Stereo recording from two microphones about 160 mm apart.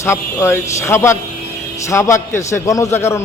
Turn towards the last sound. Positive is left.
turn(degrees=15)  # may be behind; listen again after turning